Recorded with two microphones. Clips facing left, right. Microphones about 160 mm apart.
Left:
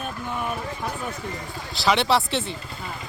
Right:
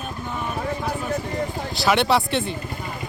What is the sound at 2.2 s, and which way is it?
Speech, 55° right (ahead or behind).